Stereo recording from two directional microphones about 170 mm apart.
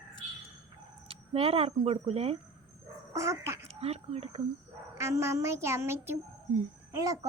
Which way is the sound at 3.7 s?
35° right (ahead or behind).